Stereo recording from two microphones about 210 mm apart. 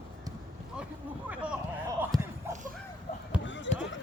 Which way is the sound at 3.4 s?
60° left (ahead or behind).